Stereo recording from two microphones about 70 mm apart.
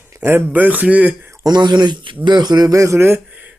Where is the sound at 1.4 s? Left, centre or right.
Right.